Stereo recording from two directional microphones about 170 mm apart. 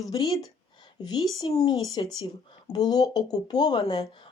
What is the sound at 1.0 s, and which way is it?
Speech, 25° left (ahead or behind).